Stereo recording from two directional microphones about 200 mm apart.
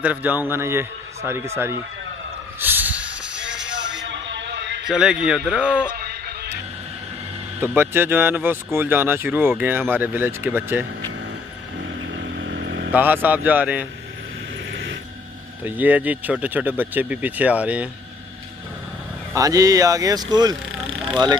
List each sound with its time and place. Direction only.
0.0 s speech: 10° right (ahead or behind)
2.6 s a sound: 10° right (ahead or behind)
3.8 s a sound: 65° right (ahead or behind)
4.8 s a man's voice: 5° right (ahead or behind)
7.6 s speech: 10° right (ahead or behind)
12.2 s vehicle: 60° right (ahead or behind)
12.9 s speech: 10° right (ahead or behind)
14.7 s a sound: 70° right (ahead or behind)
15.6 s speech: 10° right (ahead or behind)
19.3 s speech: 15° right (ahead or behind)